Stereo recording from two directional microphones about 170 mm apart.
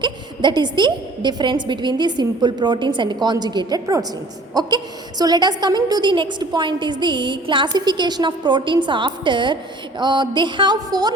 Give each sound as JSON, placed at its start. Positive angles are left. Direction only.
{"t": 0.0, "sound": "a woman's voice", "side_deg": -25}